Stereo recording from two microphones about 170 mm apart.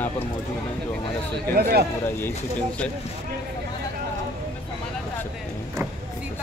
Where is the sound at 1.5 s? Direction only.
65° right (ahead or behind).